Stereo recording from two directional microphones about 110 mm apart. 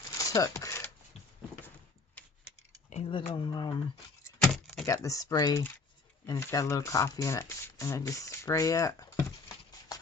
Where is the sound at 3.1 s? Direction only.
50° left (ahead or behind).